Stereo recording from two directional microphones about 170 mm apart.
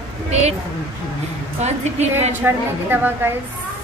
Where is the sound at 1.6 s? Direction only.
40° right (ahead or behind).